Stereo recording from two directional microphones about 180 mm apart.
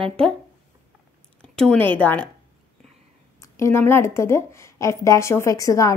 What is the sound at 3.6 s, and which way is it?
A woman's voice, 15° left (ahead or behind).